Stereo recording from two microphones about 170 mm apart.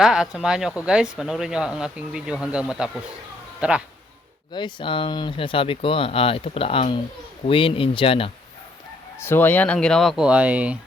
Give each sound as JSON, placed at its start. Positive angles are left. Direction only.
{"t": 0.0, "sound": "speech", "side_deg": -5}
{"t": 4.5, "sound": "speech", "side_deg": 30}
{"t": 9.1, "sound": "speech", "side_deg": 15}